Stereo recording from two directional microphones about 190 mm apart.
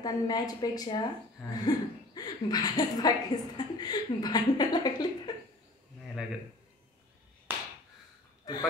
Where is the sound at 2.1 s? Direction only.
20° left (ahead or behind).